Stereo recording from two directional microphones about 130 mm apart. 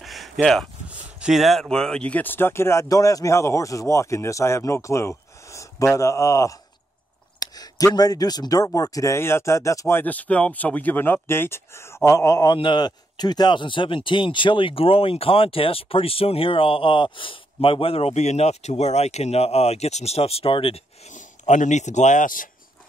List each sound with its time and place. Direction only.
0.0 s a sound: centre (ahead or behind)
0.8 s speech: 5° right (ahead or behind); by 12.5 s 25° left (ahead or behind)
12.5 s speech: 35° left (ahead or behind)
21.1 s speech: 70° left (ahead or behind); by 22.5 s 90° left